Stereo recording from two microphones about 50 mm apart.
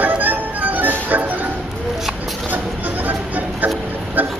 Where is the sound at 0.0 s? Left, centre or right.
Right.